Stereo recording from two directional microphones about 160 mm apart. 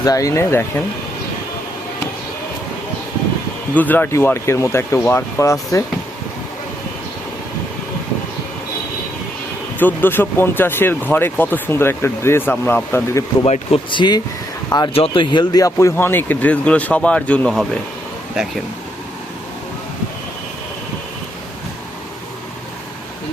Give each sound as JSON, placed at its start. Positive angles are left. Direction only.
{"t": 0.0, "sound": "speech", "side_deg": 20}
{"t": 3.8, "sound": "speech", "side_deg": 10}
{"t": 9.7, "sound": "speech", "side_deg": 10}
{"t": 13.4, "sound": "speech", "side_deg": 40}